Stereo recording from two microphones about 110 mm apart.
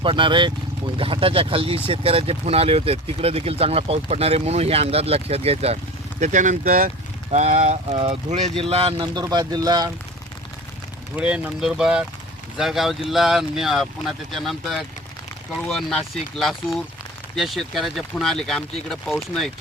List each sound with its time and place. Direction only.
0.0 s speech: 50° right (ahead or behind); by 8.5 s 75° right (ahead or behind)
8.5 s speech: 60° right (ahead or behind)
9.3 s speech: 40° right (ahead or behind)
11.2 s speech: 10° right (ahead or behind)